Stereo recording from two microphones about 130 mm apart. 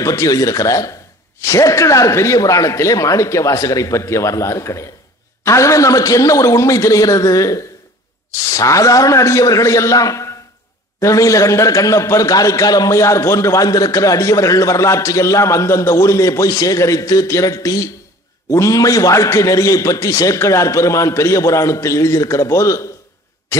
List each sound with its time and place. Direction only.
0.0 s a man's voice: 25° left (ahead or behind)